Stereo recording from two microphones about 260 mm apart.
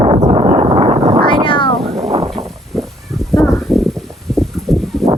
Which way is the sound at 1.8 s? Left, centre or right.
Right.